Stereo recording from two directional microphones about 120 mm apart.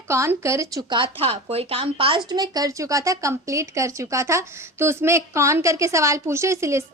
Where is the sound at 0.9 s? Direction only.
45° right (ahead or behind).